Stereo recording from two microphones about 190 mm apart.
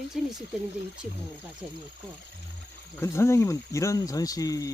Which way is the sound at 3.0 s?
15° left (ahead or behind).